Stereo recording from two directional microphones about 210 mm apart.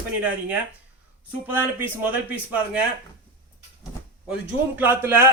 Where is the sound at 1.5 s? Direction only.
10° right (ahead or behind).